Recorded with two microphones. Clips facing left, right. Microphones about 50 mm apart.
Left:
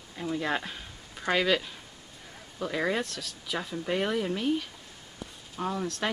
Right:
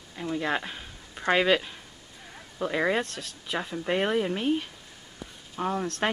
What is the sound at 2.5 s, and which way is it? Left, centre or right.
Speech, centre.